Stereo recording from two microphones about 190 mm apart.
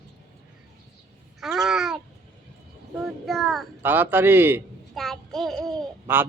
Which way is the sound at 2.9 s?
Centre (ahead or behind).